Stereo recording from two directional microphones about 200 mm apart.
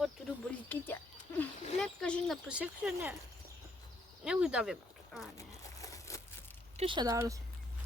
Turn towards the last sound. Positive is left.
turn(degrees=-15)  # may be behind; listen again after turning